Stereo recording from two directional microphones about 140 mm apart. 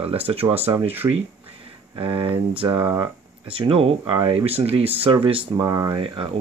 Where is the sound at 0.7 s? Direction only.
15° right (ahead or behind).